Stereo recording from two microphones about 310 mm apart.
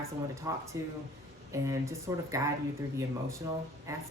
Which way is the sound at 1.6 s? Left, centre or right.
Centre.